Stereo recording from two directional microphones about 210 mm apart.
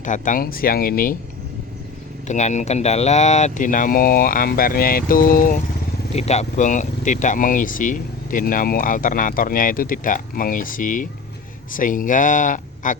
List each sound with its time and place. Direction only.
0.0 s speech: 35° left (ahead or behind)
2.2 s speech: 35° left (ahead or behind)